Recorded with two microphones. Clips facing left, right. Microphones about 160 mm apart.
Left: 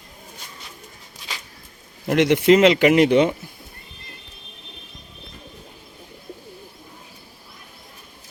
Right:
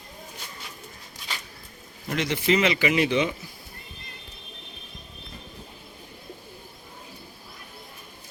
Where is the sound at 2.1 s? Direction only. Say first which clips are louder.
Left 10 dB; 70° left (ahead or behind).